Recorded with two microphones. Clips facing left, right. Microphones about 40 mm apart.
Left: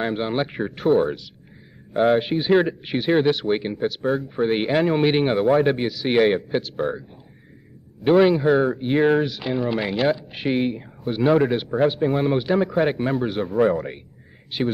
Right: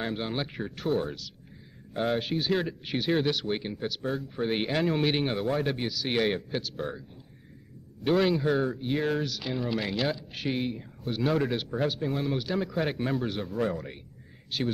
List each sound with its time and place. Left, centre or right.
0.0 s speech: left
12.0 s speech: left